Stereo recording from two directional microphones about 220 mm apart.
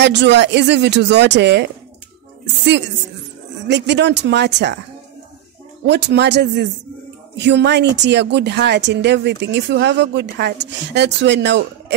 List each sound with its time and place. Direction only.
0.0 s speech: 50° right (ahead or behind)
3.6 s speech: 50° right (ahead or behind)
5.9 s speech: 50° right (ahead or behind)